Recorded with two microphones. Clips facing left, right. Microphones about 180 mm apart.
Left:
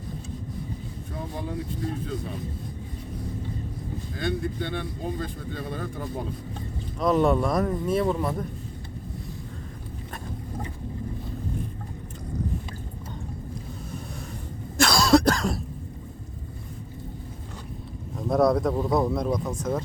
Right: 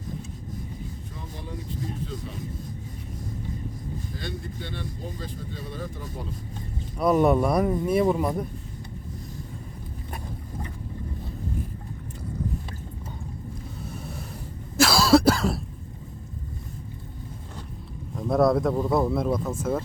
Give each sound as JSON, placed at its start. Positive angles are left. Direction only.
{"t": 4.2, "sound": "speech", "side_deg": 55}
{"t": 7.0, "sound": "speech", "side_deg": -10}
{"t": 14.8, "sound": "cough", "side_deg": -5}
{"t": 18.2, "sound": "speech", "side_deg": 0}